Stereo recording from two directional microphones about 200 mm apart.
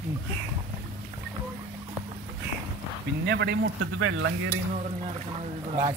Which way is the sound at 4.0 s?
90° right.